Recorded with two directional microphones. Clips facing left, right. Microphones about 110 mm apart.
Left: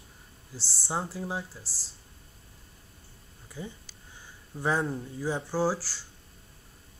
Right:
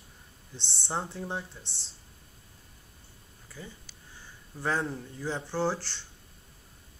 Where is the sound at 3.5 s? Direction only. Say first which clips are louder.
Left 5 dB; 15° left (ahead or behind).